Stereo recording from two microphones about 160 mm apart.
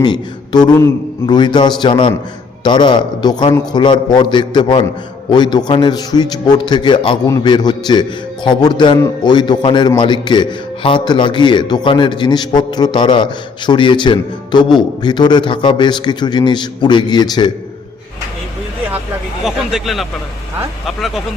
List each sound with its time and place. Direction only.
0.0 s a man's voice: 25° left (ahead or behind)
19.5 s speech: centre (ahead or behind)